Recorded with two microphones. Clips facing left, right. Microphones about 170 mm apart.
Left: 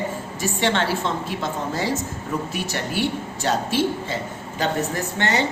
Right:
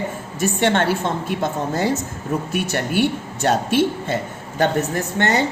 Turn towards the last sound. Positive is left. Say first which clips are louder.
# right 4 dB
turn(degrees=-50)  # may be behind; listen again after turning